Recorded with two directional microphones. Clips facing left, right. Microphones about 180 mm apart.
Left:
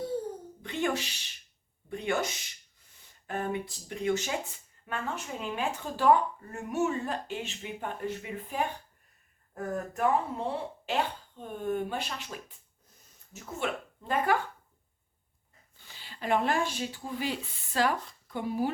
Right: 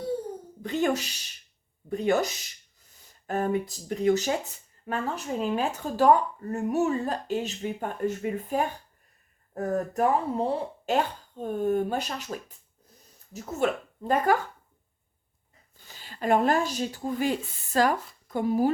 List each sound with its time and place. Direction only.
0.6 s a sound: 40° right (ahead or behind)
1.9 s speech: 40° right (ahead or behind)
16.0 s a woman's voice: 45° right (ahead or behind)